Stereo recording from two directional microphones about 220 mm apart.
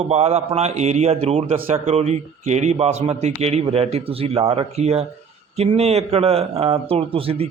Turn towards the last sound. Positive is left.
turn(degrees=-25)  # may be behind; listen again after turning